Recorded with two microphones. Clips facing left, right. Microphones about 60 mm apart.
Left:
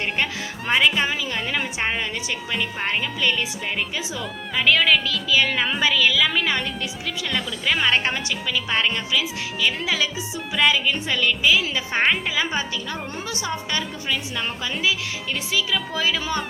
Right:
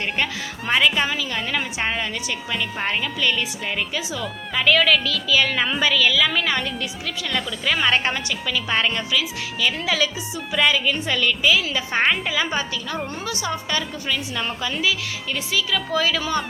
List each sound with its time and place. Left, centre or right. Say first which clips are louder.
0.7 s speech: even; centre
1.0 s speech: even; left
1.5 s speech: right 1 dB; centre
13.2 s speech: right 2 dB; left
13.5 s speech: right 1 dB; centre